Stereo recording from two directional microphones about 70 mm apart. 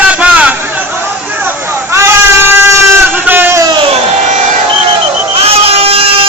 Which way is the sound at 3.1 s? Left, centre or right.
Right.